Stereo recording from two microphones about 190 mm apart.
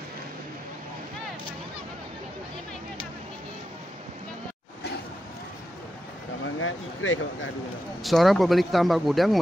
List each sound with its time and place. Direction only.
6.4 s speech: 90° left
8.0 s speech: centre (ahead or behind)